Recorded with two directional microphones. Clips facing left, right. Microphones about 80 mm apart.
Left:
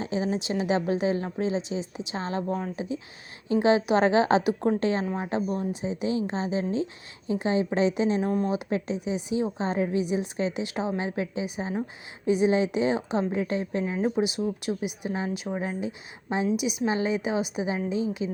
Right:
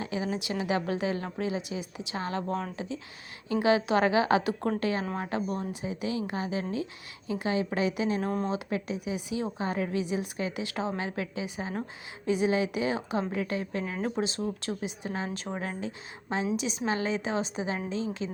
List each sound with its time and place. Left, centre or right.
0.0 s a woman's voice: left
2.5 s a woman's voice: centre
3.5 s a woman's voice: left